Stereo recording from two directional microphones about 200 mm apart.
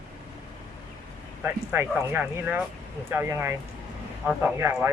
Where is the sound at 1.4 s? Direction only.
10° right (ahead or behind).